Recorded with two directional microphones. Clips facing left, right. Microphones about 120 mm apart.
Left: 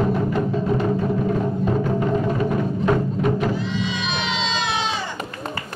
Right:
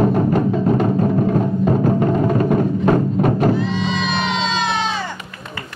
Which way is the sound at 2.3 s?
45° right (ahead or behind).